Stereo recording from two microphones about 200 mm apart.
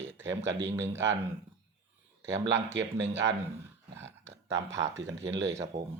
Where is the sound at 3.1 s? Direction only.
15° right (ahead or behind).